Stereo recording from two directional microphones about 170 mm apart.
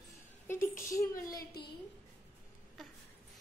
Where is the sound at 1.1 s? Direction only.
65° left (ahead or behind).